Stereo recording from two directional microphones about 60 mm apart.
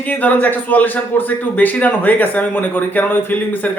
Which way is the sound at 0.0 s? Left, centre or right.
Left.